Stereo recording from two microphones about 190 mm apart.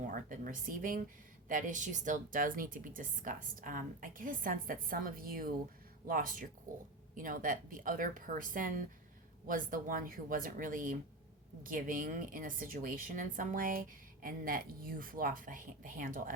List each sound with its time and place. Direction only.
0.0 s a woman's voice: 45° right (ahead or behind)